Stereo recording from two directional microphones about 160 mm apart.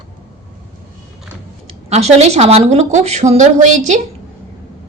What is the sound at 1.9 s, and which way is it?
A woman's voice, 40° right (ahead or behind).